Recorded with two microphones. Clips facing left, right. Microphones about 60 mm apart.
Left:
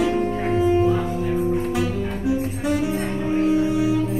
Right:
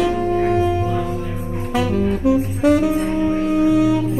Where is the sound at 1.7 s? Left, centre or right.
Right.